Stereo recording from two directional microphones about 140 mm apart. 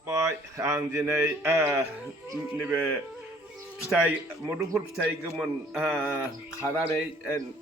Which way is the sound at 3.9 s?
10° right (ahead or behind).